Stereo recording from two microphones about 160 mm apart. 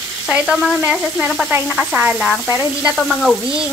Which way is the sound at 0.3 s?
Centre (ahead or behind).